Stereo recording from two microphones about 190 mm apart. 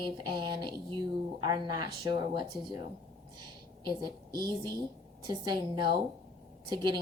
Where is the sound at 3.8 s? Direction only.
25° right (ahead or behind).